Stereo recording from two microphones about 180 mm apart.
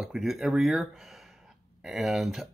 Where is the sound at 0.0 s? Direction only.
Centre (ahead or behind).